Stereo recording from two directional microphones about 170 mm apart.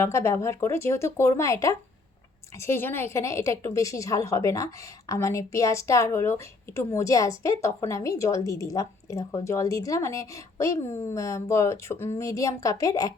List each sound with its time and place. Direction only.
0.0 s a woman's voice: 15° left (ahead or behind)